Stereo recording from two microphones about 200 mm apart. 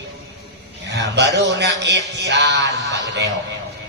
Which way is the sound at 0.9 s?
60° right (ahead or behind).